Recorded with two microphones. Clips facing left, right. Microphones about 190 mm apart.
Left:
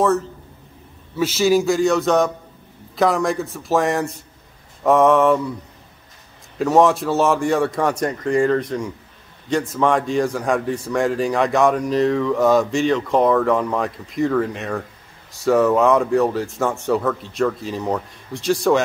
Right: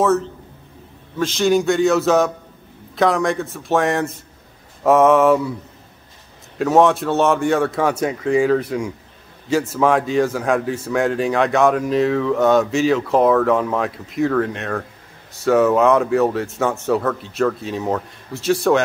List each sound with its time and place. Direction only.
1.1 s speech: 5° left (ahead or behind)
6.6 s speech: centre (ahead or behind)